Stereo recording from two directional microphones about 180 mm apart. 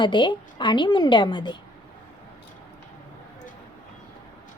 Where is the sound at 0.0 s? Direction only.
25° left (ahead or behind).